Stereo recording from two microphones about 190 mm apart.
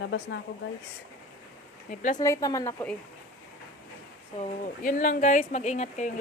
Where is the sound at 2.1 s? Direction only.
15° left (ahead or behind).